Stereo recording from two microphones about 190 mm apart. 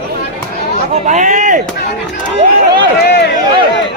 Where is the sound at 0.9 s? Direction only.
40° right (ahead or behind).